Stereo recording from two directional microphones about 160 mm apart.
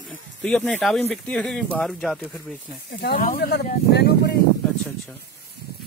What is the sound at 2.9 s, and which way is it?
Speech, 70° left (ahead or behind).